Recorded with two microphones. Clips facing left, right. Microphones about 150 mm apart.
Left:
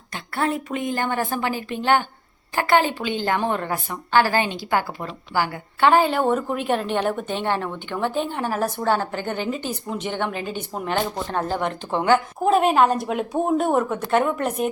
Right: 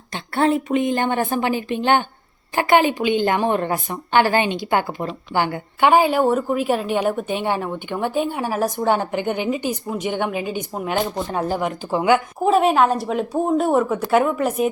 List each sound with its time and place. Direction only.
0.1 s a woman's voice: 25° right (ahead or behind)
5.9 s a woman's voice: 10° right (ahead or behind)